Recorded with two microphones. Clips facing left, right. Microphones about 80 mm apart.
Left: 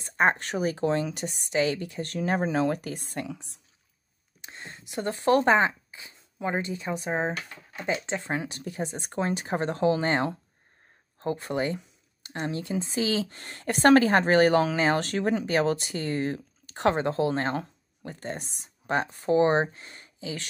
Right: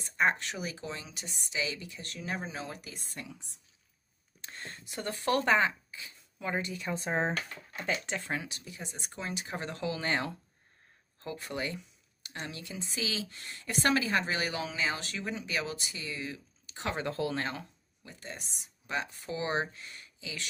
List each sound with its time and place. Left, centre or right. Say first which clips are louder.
0.0 s speech: left 5 dB; left
4.4 s speech: left 2 dB; centre
6.9 s speech: left 2 dB; centre
7.7 s speech: left 5 dB; left
8.5 s speech: left 11 dB; left
16.9 s speech: left 7 dB; left
18.0 s speech: left 10 dB; left